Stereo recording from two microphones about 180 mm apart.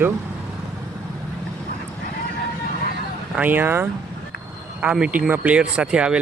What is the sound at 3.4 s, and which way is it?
Speech, 10° right (ahead or behind).